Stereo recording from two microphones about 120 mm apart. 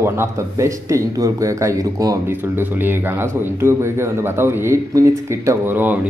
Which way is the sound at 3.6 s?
20° right (ahead or behind).